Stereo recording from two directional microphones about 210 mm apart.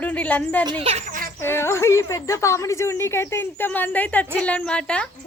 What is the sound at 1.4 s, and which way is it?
A woman's voice, 10° left (ahead or behind).